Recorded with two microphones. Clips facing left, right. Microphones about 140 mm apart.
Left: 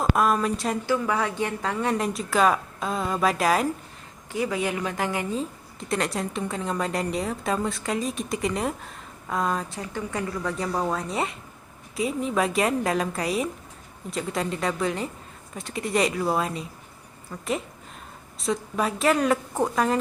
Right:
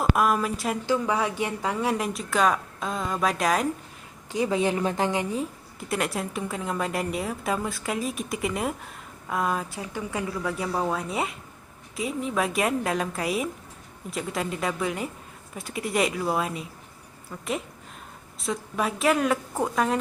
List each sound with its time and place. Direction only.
0.0 s a sound: 5° right (ahead or behind)
0.9 s a woman's voice: 15° right (ahead or behind); by 3.7 s centre (ahead or behind)
4.3 s a woman's voice: 25° right (ahead or behind)
5.9 s a woman's voice: 5° right (ahead or behind)
18.3 s a woman's voice: centre (ahead or behind)